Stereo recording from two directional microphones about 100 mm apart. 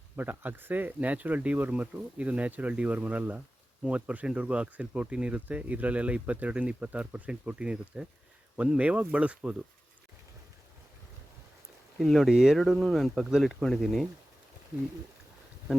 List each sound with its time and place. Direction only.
0.2 s speech: 20° right (ahead or behind)
11.9 s speech: centre (ahead or behind)